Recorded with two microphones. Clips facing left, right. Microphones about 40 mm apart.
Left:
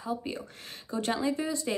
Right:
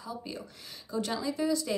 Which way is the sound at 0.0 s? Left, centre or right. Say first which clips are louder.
Left 5 dB; left.